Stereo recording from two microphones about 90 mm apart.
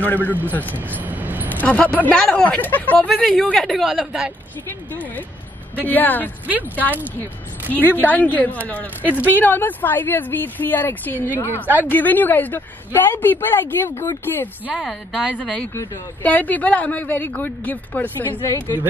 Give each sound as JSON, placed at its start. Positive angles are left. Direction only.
{"t": 0.0, "sound": "a woman's voice", "side_deg": 20}
{"t": 0.7, "sound": "a sound", "side_deg": -20}
{"t": 1.5, "sound": "speech", "side_deg": 15}
{"t": 3.1, "sound": "speech", "side_deg": 5}
{"t": 4.6, "sound": "a woman's voice", "side_deg": 20}
{"t": 6.4, "sound": "speech", "side_deg": -20}
{"t": 7.7, "sound": "a woman's voice", "side_deg": 20}
{"t": 9.1, "sound": "speech", "side_deg": -15}
{"t": 9.4, "sound": "a woman's voice", "side_deg": 20}
{"t": 11.5, "sound": "speech", "side_deg": -20}
{"t": 11.9, "sound": "a woman's voice", "side_deg": 20}
{"t": 14.7, "sound": "speech", "side_deg": -5}
{"t": 16.2, "sound": "a woman's voice", "side_deg": 20}